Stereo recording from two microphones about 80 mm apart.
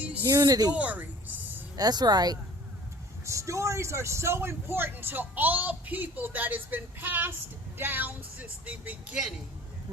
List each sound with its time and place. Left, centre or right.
0.3 s speech: right
0.7 s a sound: centre
1.7 s speech: right
3.2 s speech: right; by 9.1 s centre